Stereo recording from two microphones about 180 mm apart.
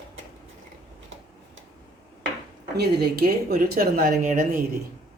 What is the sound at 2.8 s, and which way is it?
Speech, 60° right (ahead or behind).